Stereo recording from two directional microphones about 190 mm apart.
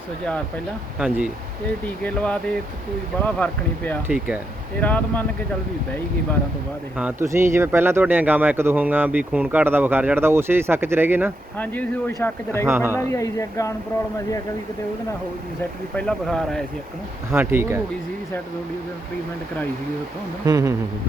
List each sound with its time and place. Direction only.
0.9 s speech: 5° right (ahead or behind)
1.8 s speech: 5° left (ahead or behind)
6.9 s speech: 10° right (ahead or behind)
11.5 s speech: 10° left (ahead or behind)
12.6 s speech: 10° right (ahead or behind)
12.9 s speech: 15° left (ahead or behind)
16.0 s speech: 5° left (ahead or behind)
17.3 s speech: 10° right (ahead or behind)
20.4 s speech: 15° right (ahead or behind)